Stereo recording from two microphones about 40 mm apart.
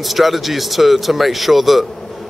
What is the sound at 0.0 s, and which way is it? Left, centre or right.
A man's voice, centre.